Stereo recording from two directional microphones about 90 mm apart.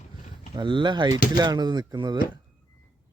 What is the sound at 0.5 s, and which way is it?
Speech, 60° right (ahead or behind).